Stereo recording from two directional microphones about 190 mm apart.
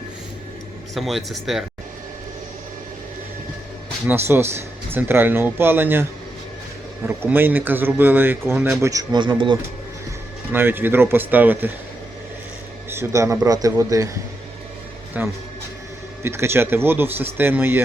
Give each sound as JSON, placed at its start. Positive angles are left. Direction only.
{"t": 0.9, "sound": "speech", "side_deg": 0}
{"t": 4.0, "sound": "speech", "side_deg": -10}
{"t": 7.3, "sound": "speech", "side_deg": -10}
{"t": 10.5, "sound": "speech", "side_deg": -10}
{"t": 12.9, "sound": "speech", "side_deg": -15}
{"t": 15.1, "sound": "speech", "side_deg": -10}